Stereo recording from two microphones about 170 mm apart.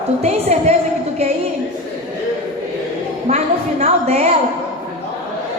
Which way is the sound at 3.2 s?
40° right (ahead or behind).